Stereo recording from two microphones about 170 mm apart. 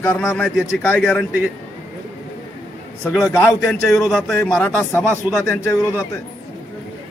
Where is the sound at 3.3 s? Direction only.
15° left (ahead or behind).